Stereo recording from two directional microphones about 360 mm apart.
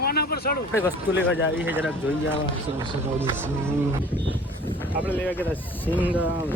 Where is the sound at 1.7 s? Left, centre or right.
Centre.